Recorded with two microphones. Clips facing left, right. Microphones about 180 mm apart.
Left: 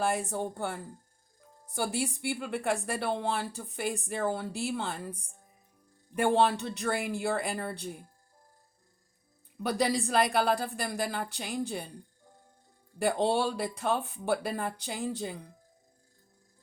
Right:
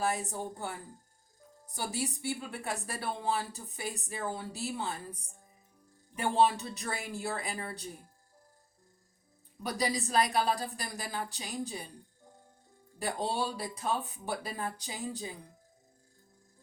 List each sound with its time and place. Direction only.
0.3 s speech: 70° left (ahead or behind)
6.1 s speech: 65° left (ahead or behind)
9.6 s speech: 60° left (ahead or behind)
13.2 s speech: 65° left (ahead or behind)